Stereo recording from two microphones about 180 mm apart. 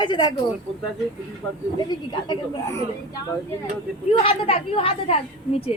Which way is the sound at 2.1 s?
25° left (ahead or behind).